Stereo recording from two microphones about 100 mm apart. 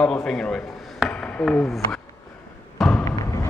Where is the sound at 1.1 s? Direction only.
15° left (ahead or behind).